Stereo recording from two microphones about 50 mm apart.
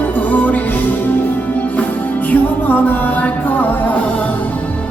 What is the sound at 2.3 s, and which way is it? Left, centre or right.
Music, left.